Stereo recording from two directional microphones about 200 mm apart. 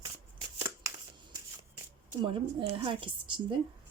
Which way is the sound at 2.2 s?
25° right (ahead or behind).